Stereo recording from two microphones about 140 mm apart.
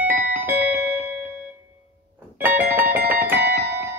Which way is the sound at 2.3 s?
15° right (ahead or behind).